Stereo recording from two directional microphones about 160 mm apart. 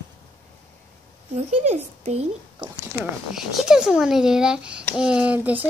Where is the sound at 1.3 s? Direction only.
40° right (ahead or behind).